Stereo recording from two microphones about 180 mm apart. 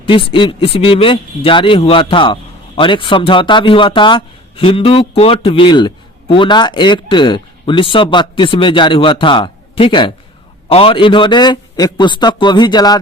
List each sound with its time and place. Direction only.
0.0 s speech: 30° left (ahead or behind)